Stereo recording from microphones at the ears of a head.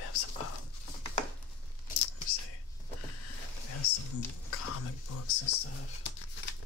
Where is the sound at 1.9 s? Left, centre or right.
Left.